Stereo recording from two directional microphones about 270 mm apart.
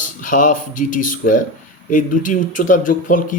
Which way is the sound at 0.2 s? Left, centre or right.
Left.